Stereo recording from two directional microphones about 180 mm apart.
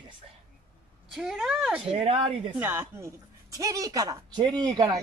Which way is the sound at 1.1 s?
Centre (ahead or behind).